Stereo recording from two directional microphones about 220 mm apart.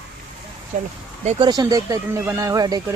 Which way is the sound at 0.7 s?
35° right (ahead or behind).